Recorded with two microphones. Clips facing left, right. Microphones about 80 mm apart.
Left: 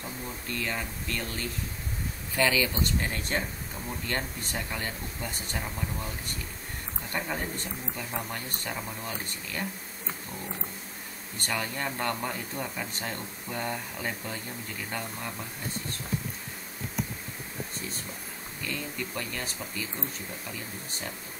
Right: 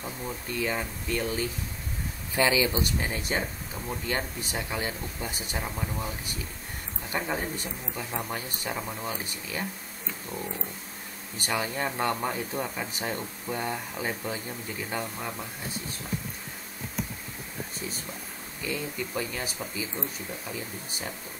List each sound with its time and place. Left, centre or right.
0.6 s speech: centre
11.3 s speech: centre
17.7 s speech: centre